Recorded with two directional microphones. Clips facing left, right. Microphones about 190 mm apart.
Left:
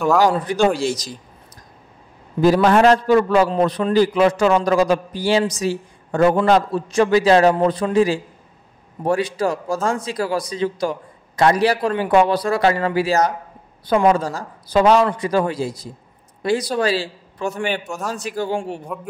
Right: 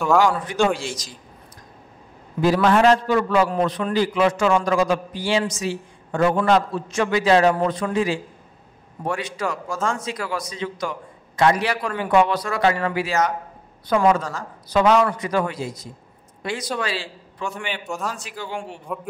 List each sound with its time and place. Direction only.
0.3 s a man's voice: 35° left (ahead or behind)
2.4 s a man's voice: 40° left (ahead or behind)